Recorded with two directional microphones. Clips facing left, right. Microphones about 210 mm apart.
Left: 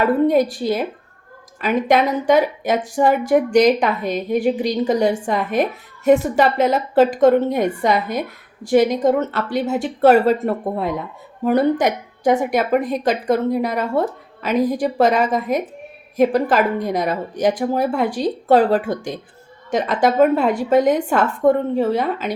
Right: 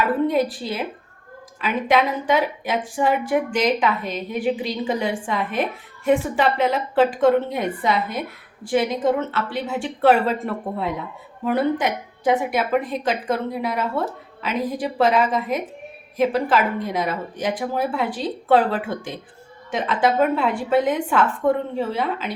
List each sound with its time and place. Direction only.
0.3 s a woman's voice: 45° left (ahead or behind)